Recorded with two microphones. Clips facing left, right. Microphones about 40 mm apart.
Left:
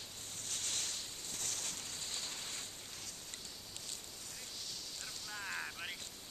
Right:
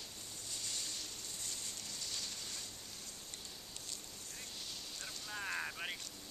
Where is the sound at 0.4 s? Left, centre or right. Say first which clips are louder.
Left 3 dB; left.